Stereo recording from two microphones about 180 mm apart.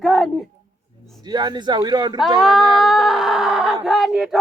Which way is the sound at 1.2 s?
25° right (ahead or behind).